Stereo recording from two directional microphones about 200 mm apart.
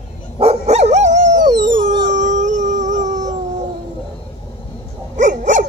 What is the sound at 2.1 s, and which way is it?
Howl, 40° right (ahead or behind).